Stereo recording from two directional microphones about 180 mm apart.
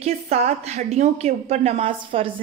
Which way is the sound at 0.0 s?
35° right (ahead or behind).